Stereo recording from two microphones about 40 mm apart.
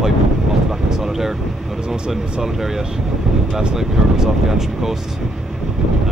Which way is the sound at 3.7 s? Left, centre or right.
Centre.